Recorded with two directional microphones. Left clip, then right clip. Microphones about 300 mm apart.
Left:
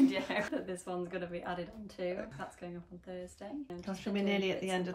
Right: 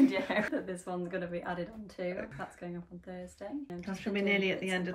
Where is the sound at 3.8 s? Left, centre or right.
Centre.